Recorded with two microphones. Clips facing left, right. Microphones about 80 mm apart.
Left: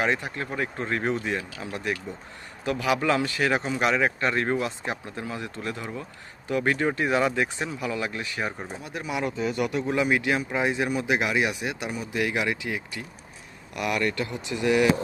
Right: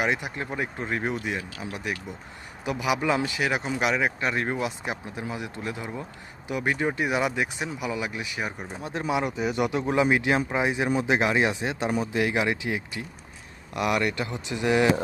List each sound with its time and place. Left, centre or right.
0.0 s speech: centre
8.8 s speech: right
9.2 s speech: centre